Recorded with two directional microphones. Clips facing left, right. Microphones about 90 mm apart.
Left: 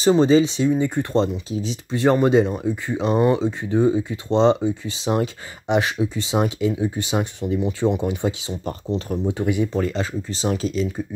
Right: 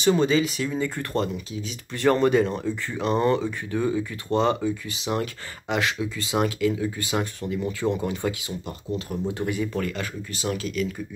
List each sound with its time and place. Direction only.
0.0 s speech: 30° left (ahead or behind)
1.9 s speech: 20° left (ahead or behind)
8.6 s speech: 35° left (ahead or behind)
9.2 s speech: 15° left (ahead or behind)